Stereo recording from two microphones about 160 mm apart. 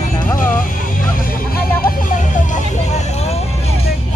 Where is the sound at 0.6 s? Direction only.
60° left (ahead or behind); by 3.7 s 40° left (ahead or behind).